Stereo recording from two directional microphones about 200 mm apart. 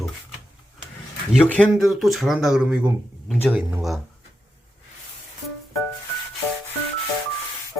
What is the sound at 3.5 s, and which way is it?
Speech, 5° right (ahead or behind).